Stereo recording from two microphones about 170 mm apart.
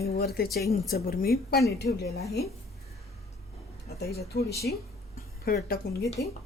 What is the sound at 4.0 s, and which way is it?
Speech, 70° left (ahead or behind).